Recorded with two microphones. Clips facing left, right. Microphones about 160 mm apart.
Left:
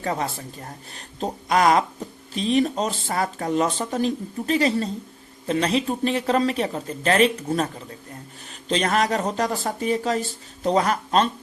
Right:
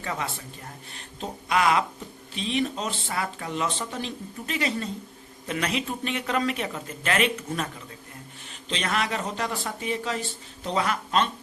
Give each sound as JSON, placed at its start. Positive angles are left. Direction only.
{"t": 0.0, "sound": "speech", "side_deg": 35}
{"t": 8.7, "sound": "speech", "side_deg": 40}